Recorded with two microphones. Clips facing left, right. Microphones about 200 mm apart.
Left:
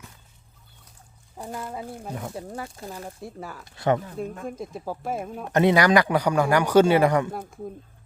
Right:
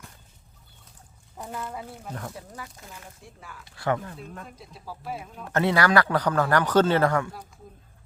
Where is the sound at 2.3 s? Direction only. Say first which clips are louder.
Left 7 dB; 30° left (ahead or behind).